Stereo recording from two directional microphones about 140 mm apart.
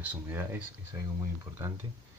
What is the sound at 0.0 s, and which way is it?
Speech, 15° right (ahead or behind).